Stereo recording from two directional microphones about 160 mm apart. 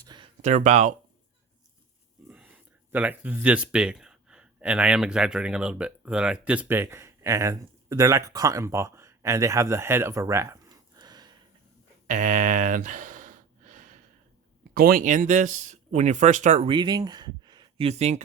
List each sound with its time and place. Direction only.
0.0 s a sound: 25° right (ahead or behind)
0.4 s speech: 50° right (ahead or behind)
2.2 s speech: 10° right (ahead or behind); by 11.3 s 25° right (ahead or behind)
12.0 s gasp: 55° right (ahead or behind)
14.7 s speech: 65° right (ahead or behind); by 16.7 s 45° right (ahead or behind)
16.7 s speech: 25° right (ahead or behind)
17.8 s speech: 40° right (ahead or behind)